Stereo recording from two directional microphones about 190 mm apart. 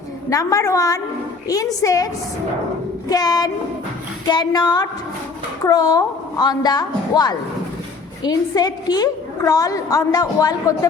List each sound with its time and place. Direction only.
0.3 s a woman's voice: 15° left (ahead or behind)
3.1 s a woman's voice: 20° left (ahead or behind)